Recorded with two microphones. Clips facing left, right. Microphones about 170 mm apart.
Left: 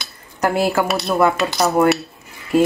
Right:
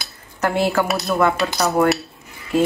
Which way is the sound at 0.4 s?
15° left (ahead or behind).